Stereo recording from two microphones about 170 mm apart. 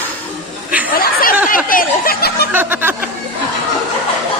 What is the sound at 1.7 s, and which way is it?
Speech, 55° left (ahead or behind).